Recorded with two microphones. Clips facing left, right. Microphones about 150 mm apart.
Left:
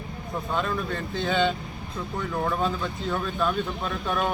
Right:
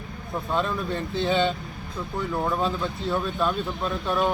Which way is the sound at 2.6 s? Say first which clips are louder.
Right 1 dB; centre (ahead or behind).